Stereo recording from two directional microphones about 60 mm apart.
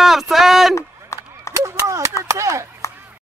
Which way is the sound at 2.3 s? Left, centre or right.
Right.